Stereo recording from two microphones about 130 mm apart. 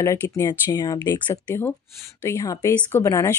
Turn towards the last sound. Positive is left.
turn(degrees=25)  # may be behind; listen again after turning